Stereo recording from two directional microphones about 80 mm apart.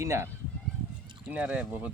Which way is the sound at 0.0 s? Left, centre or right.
Right.